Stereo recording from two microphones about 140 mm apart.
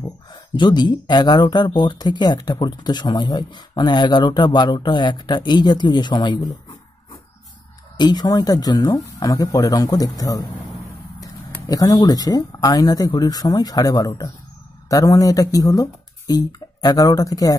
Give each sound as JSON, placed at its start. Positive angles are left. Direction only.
{"t": 0.3, "sound": "speech", "side_deg": 30}
{"t": 8.0, "sound": "speech", "side_deg": 30}
{"t": 11.6, "sound": "speech", "side_deg": 25}